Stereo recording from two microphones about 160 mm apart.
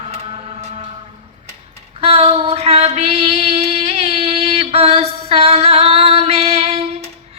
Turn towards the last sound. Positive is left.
turn(degrees=-40)  # may be behind; listen again after turning